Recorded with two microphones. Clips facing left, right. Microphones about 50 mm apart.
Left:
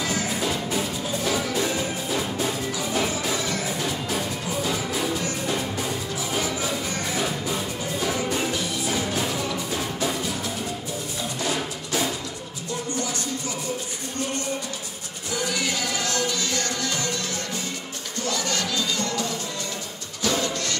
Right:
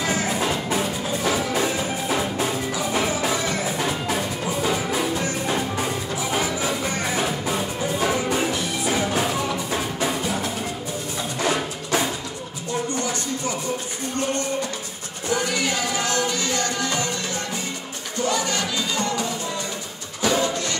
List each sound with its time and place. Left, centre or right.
0.0 s music: right
15.2 s music: right
15.9 s music: right
18.2 s music: right